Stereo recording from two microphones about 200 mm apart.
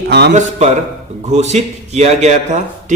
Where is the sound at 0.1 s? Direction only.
55° right (ahead or behind).